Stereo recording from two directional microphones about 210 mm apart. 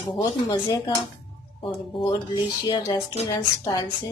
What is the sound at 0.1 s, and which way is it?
Speech, 20° left (ahead or behind).